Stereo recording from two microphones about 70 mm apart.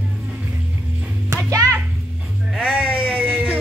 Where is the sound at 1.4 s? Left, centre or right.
Right.